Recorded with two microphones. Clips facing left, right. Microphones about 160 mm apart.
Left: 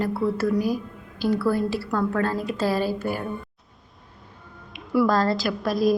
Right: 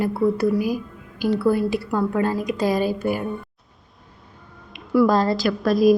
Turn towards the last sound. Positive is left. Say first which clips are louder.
# right 5 dB
turn(degrees=0)  # may be behind; listen again after turning